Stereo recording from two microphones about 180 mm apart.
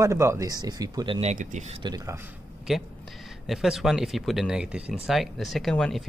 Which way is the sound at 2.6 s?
Centre (ahead or behind).